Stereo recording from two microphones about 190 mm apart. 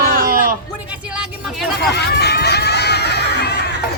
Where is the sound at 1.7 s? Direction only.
60° left (ahead or behind).